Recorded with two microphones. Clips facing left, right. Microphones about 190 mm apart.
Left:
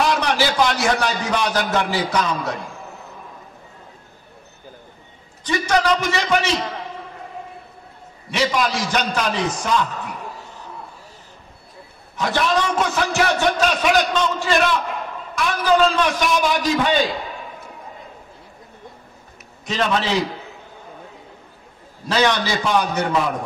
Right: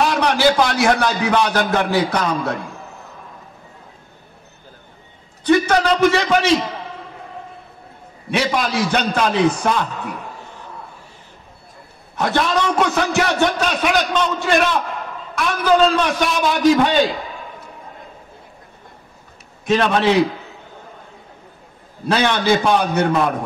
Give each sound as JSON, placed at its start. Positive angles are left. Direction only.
{"t": 0.1, "sound": "a man's voice", "side_deg": -60}
{"t": 5.4, "sound": "a man's voice", "side_deg": -55}
{"t": 8.3, "sound": "a man's voice", "side_deg": -60}
{"t": 12.2, "sound": "a man's voice", "side_deg": -60}
{"t": 19.6, "sound": "a man's voice", "side_deg": -55}
{"t": 22.0, "sound": "a man's voice", "side_deg": -60}